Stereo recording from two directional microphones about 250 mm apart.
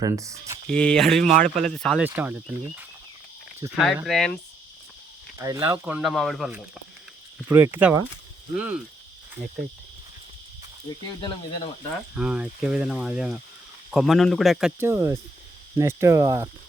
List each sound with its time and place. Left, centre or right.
0.0 s speech: centre
0.7 s speech: centre
1.2 s speech: right
1.5 s speech: centre
2.0 s speech: centre
3.8 s speech: centre
5.4 s speech: centre
11.9 s speech: centre